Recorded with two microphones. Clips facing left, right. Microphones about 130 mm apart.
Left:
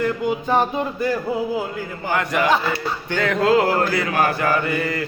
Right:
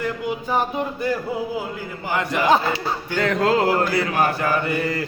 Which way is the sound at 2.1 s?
25° right (ahead or behind).